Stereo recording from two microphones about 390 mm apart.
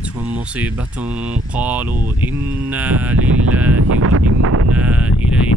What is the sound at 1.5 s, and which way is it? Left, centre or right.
Speech, centre.